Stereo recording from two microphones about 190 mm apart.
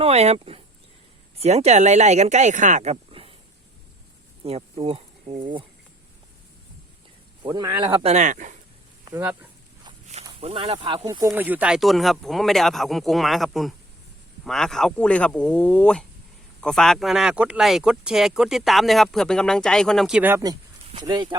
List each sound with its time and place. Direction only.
0.0 s speech: 35° right (ahead or behind)
4.4 s speech: 30° right (ahead or behind)
7.4 s speech: 20° right (ahead or behind)
8.0 s speech: 40° right (ahead or behind)
9.0 s speech: 10° right (ahead or behind)
10.4 s speech: 30° right (ahead or behind)
11.3 s speech: 10° right (ahead or behind)